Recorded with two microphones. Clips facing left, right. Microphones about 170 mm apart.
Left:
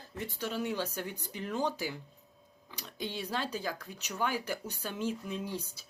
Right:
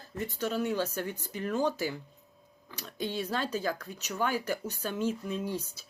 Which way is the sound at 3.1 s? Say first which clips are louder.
Right 3 dB; 15° left (ahead or behind).